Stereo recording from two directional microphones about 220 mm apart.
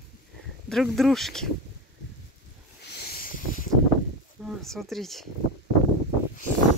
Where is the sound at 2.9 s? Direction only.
45° left (ahead or behind).